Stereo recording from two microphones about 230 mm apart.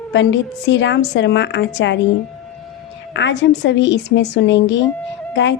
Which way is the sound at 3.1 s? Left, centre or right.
Left.